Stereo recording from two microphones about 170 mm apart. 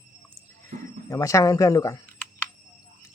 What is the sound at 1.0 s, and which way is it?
Speech, 20° left (ahead or behind).